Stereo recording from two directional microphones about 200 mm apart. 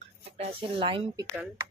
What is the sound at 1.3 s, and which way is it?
Speech, 10° right (ahead or behind).